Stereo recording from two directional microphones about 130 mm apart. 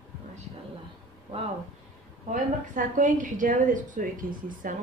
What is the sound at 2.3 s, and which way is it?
A woman's voice, 90° right.